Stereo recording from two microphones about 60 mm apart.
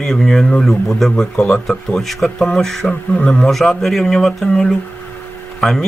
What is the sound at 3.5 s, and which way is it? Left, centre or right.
A man's voice, centre.